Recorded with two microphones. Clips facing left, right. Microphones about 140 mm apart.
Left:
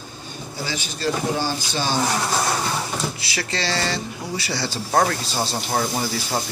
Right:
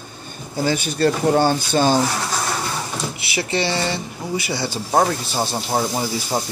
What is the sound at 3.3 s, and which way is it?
Speech, 20° right (ahead or behind).